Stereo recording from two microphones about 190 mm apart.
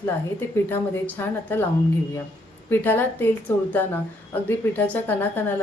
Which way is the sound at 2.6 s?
10° left (ahead or behind).